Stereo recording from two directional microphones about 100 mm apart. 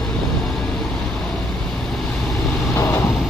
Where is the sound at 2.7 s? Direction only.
25° left (ahead or behind).